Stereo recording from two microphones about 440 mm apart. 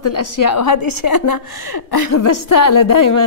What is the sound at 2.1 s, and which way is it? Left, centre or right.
A woman's voice, left.